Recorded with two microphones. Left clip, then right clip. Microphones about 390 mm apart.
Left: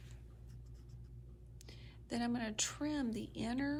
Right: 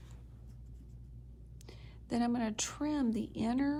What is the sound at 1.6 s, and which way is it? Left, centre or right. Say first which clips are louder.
A woman's voice: right 2 dB; centre.